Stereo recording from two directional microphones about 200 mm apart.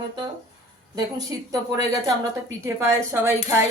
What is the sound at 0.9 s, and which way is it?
A woman's voice, 20° right (ahead or behind).